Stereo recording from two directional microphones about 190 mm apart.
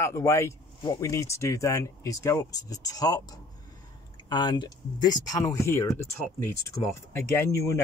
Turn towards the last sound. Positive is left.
turn(degrees=15)  # may be behind; listen again after turning